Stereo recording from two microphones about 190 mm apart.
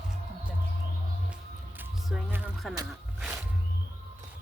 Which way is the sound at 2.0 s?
5° right (ahead or behind).